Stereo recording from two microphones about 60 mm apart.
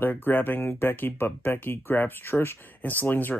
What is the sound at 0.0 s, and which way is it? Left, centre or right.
Speech, left.